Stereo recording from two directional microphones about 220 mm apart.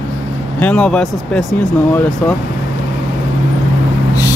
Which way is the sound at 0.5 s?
5° left (ahead or behind).